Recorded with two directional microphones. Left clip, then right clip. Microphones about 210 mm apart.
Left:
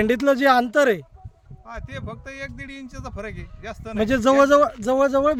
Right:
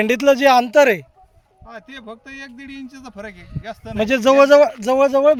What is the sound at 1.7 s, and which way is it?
A man's voice, 30° left (ahead or behind).